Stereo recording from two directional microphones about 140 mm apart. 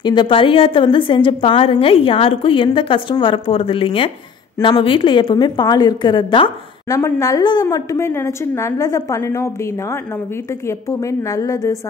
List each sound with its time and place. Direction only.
0.0 s a woman's voice: 35° left (ahead or behind)
6.9 s a woman's voice: 25° left (ahead or behind)